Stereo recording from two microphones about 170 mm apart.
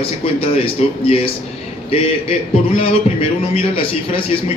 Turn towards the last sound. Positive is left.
turn(degrees=35)  # may be behind; listen again after turning